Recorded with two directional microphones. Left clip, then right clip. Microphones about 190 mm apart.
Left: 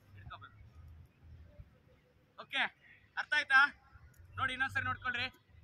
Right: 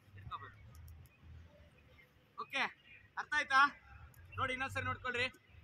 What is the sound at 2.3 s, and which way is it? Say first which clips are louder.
A man's voice: left 2 dB; 20° left (ahead or behind).